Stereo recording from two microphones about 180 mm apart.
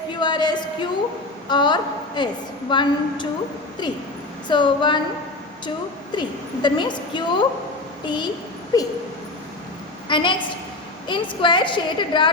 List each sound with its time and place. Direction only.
0.1 s a sound: 25° left (ahead or behind)
1.5 s a woman's voice: 25° left (ahead or behind)
4.4 s a woman's voice: 25° left (ahead or behind)
10.1 s a woman's voice: 25° left (ahead or behind)